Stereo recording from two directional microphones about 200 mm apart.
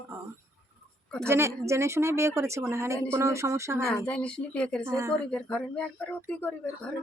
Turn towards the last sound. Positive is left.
turn(degrees=5)  # may be behind; listen again after turning